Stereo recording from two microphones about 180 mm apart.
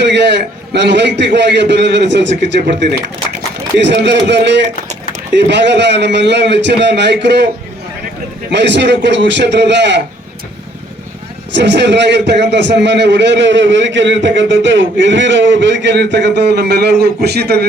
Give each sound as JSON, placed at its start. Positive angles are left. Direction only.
{"t": 0.0, "sound": "a man's voice", "side_deg": -75}
{"t": 3.8, "sound": "a man's voice", "side_deg": -75}
{"t": 8.4, "sound": "a man's voice", "side_deg": -75}
{"t": 11.5, "sound": "a man's voice", "side_deg": -75}